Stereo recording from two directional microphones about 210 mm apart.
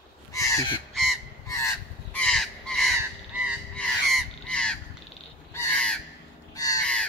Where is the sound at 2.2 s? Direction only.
Centre (ahead or behind).